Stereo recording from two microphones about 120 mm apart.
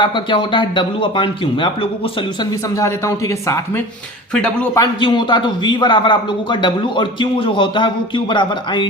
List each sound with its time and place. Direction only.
0.0 s speech: 45° left (ahead or behind)
4.4 s a man's voice: 10° left (ahead or behind)
4.7 s a man's voice: 35° left (ahead or behind)